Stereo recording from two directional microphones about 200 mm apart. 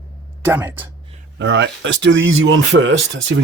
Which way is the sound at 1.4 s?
65° right (ahead or behind).